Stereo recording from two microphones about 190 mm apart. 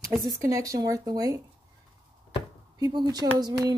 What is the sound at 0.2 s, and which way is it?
Speech, 15° right (ahead or behind).